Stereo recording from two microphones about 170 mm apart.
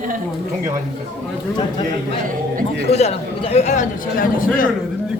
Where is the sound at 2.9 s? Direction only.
40° left (ahead or behind); by 4.7 s 55° left (ahead or behind).